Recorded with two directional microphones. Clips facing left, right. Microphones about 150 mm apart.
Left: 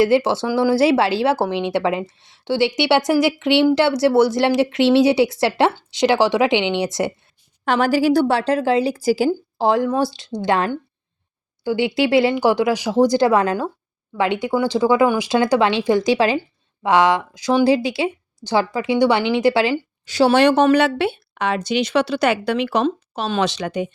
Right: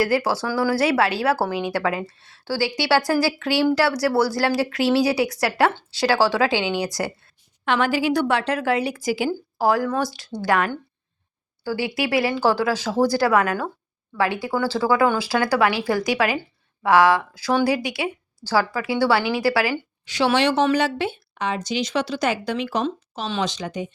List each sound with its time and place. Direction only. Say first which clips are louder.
0.0 s speech: left 5 dB; 25° left (ahead or behind)
7.6 s speech: left 4 dB; 40° left (ahead or behind)
9.6 s speech: left 2 dB; 25° left (ahead or behind)
20.1 s speech: left 5 dB; 35° left (ahead or behind)
20.4 s speech: left 5 dB; 50° left (ahead or behind); by 23.9 s 70° left (ahead or behind)